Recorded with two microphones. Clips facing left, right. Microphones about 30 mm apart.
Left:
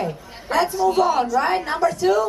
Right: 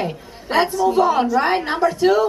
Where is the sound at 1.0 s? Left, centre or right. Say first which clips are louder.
Right 3 dB; right.